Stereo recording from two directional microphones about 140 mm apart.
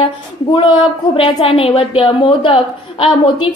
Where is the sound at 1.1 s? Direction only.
40° left (ahead or behind).